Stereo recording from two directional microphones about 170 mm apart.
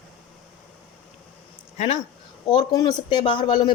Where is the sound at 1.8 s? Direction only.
40° left (ahead or behind).